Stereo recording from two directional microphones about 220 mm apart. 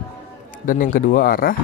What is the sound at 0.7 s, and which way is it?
Speech, 40° left (ahead or behind).